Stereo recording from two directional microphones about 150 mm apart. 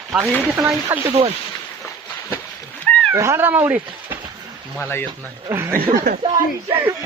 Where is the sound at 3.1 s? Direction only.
15° right (ahead or behind).